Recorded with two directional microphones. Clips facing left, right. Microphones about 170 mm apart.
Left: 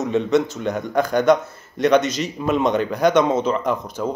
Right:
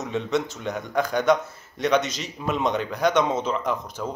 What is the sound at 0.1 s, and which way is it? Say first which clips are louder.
A man's voice: left 6 dB; centre (ahead or behind).